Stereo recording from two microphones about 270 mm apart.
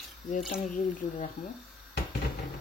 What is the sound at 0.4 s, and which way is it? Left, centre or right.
Speech, centre.